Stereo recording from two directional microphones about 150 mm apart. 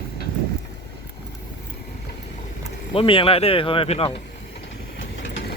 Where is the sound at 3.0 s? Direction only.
35° left (ahead or behind).